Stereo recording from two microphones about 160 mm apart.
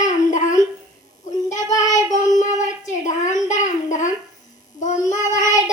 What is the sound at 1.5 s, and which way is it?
Child singing, 20° left (ahead or behind).